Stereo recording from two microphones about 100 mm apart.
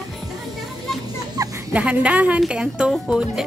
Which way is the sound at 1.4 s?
35° right (ahead or behind).